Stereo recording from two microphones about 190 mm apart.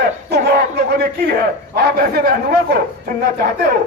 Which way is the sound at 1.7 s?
55° right (ahead or behind).